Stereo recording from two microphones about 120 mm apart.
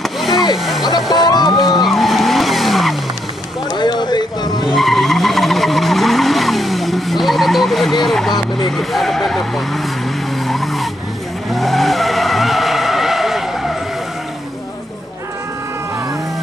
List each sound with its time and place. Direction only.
0.2 s a sound: centre (ahead or behind)
1.1 s music: 35° left (ahead or behind)
1.9 s vehicle: centre (ahead or behind)
3.7 s vehicle: 40° left (ahead or behind)
4.7 s skidding: centre (ahead or behind)
8.0 s vehicle: centre (ahead or behind)
8.4 s vehicle: 40° left (ahead or behind)
8.7 s vehicle: centre (ahead or behind)